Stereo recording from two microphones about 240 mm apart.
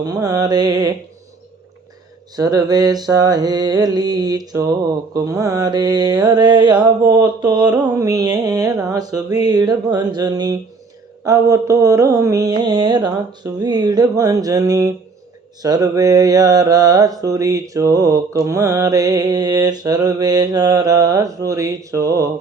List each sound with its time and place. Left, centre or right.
0.0 s mantra: centre
2.3 s mantra: centre